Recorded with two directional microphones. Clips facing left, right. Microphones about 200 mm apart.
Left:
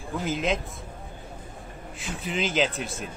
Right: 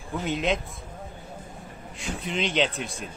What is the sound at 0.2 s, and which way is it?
Speech, centre (ahead or behind).